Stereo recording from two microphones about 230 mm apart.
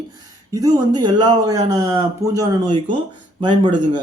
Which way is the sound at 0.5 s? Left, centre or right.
Centre.